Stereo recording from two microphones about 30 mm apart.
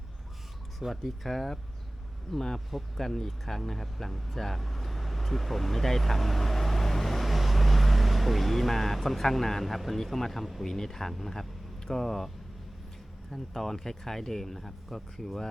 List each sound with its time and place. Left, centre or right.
1.0 s speech: centre
13.3 s speech: centre